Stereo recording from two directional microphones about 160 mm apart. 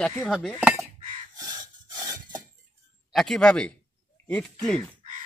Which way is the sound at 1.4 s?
25° right (ahead or behind).